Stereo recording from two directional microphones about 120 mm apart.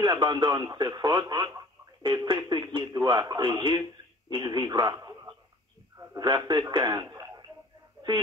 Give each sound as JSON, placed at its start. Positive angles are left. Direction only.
{"t": 0.0, "sound": "speech", "side_deg": -35}
{"t": 4.7, "sound": "a sound", "side_deg": -30}
{"t": 5.9, "sound": "speech", "side_deg": -35}